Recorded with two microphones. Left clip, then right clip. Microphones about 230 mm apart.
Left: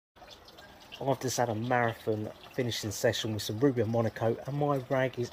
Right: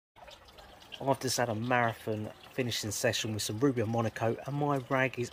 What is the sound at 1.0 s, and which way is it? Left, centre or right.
Speech, centre.